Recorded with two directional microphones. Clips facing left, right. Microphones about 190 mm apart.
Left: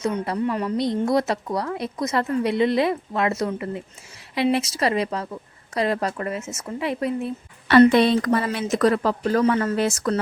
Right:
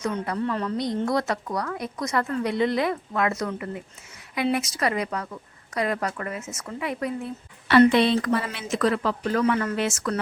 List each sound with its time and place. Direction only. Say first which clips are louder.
0.0 s a woman's voice: left 3 dB; 25° left (ahead or behind)
0.4 s a woman's voice: left 4 dB; 15° left (ahead or behind)
7.7 s a woman's voice: left 3 dB; 45° left (ahead or behind)